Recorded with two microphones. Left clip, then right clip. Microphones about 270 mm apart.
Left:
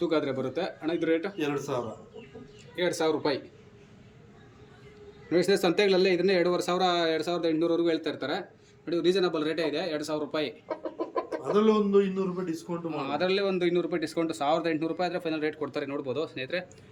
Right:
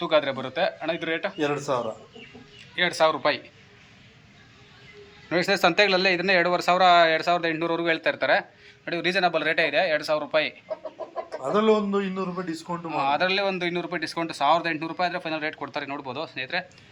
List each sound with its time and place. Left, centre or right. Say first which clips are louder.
0.0 s speech: right 5 dB; centre
1.4 s speech: right 5 dB; centre
2.7 s speech: right 5 dB; centre
5.3 s speech: right 3 dB; centre
11.5 s a man's voice: right 1 dB; centre
12.9 s speech: right 6 dB; centre